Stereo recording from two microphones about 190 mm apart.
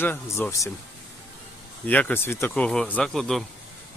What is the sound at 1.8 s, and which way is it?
Speech, 10° left (ahead or behind).